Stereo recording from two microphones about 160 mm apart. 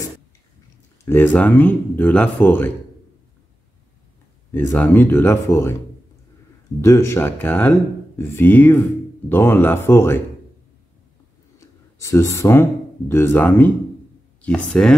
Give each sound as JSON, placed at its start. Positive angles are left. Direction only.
{"t": 1.0, "sound": "speech", "side_deg": 10}
{"t": 4.5, "sound": "speech", "side_deg": 10}
{"t": 6.8, "sound": "speech", "side_deg": 20}
{"t": 12.0, "sound": "speech", "side_deg": 20}